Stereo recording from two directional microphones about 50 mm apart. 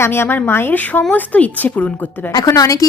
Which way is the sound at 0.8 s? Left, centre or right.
Left.